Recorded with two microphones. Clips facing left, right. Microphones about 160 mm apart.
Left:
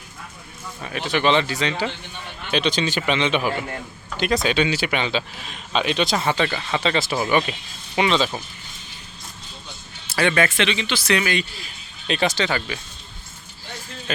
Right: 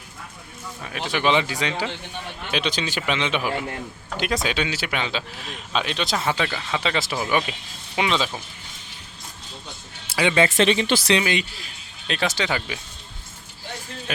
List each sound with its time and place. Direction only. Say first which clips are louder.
0.8 s a man's voice: left 3 dB; centre (ahead or behind)
10.1 s music: left 1 dB; 15° right (ahead or behind)
10.6 s speech: right 4 dB; 45° right (ahead or behind)
11.1 s a man's voice: left 3 dB; 20° right (ahead or behind)
11.5 s speech: left 2 dB; centre (ahead or behind)